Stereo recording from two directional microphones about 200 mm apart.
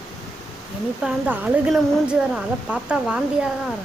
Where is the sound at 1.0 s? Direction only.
5° right (ahead or behind).